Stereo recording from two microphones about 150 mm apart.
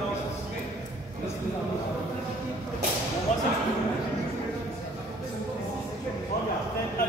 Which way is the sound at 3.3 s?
55° left (ahead or behind).